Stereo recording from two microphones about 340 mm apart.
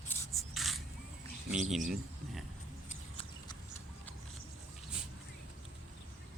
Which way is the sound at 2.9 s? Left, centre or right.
Centre.